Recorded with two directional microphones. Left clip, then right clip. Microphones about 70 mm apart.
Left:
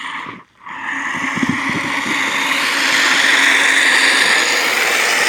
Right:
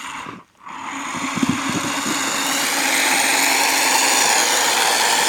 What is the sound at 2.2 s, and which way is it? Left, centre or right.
Vehicle, centre.